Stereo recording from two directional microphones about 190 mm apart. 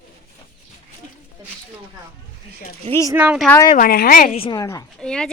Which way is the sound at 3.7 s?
50° left (ahead or behind).